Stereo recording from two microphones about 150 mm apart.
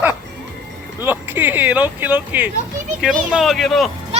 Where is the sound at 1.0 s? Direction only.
15° right (ahead or behind).